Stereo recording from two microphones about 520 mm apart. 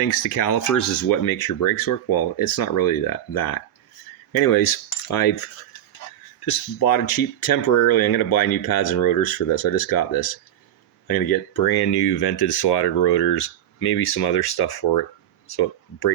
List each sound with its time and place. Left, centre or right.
0.4 s speech: left
4.3 s cutlery: left
6.4 s speech: left